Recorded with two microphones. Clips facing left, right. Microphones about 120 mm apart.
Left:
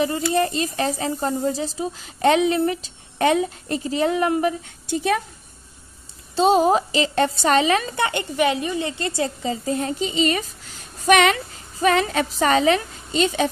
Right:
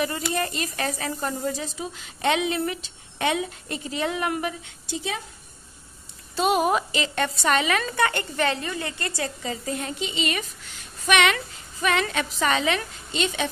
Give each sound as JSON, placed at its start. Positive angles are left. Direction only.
{"t": 0.3, "sound": "a woman's voice", "side_deg": 30}
{"t": 4.8, "sound": "speech", "side_deg": 55}
{"t": 6.3, "sound": "a woman's voice", "side_deg": 30}
{"t": 7.9, "sound": "a woman's voice", "side_deg": 20}